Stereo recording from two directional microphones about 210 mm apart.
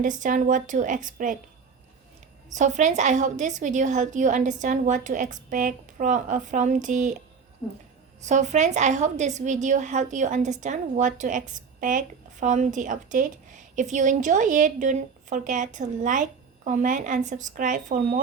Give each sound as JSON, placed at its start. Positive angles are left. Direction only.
{"t": 0.2, "sound": "a woman's voice", "side_deg": -40}
{"t": 2.6, "sound": "a woman's voice", "side_deg": -35}
{"t": 8.2, "sound": "a woman's voice", "side_deg": -35}